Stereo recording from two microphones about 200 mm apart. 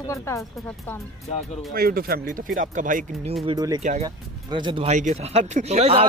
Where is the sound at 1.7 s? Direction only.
50° right (ahead or behind).